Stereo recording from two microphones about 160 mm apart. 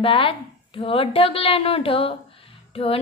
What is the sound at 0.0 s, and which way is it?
A woman's voice, 35° left (ahead or behind).